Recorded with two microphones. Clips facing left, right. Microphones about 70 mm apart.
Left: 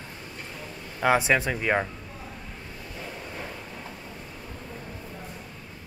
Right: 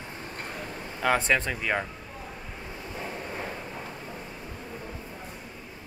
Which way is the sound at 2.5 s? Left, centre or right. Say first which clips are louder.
Right 2 dB; centre.